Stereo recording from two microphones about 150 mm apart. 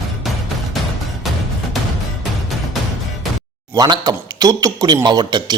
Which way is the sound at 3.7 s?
30° right (ahead or behind).